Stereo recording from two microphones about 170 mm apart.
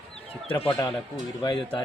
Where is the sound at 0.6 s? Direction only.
30° left (ahead or behind).